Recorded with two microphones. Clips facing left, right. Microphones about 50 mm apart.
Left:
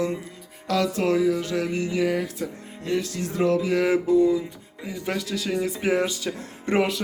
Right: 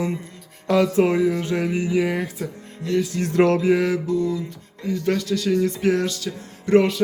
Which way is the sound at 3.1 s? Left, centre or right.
Right.